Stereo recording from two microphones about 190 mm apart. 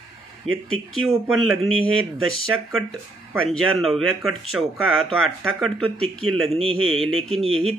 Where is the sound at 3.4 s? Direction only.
Centre (ahead or behind).